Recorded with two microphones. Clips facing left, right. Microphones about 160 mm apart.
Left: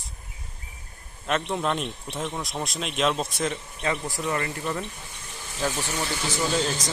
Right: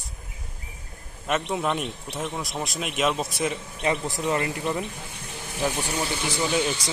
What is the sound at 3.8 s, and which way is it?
Speech, 20° right (ahead or behind).